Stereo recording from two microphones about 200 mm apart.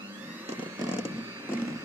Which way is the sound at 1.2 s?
15° right (ahead or behind).